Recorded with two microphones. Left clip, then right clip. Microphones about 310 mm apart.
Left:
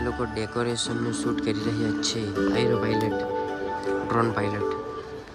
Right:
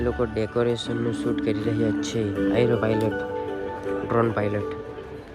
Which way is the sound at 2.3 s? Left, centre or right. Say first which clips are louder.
Right 2 dB; left.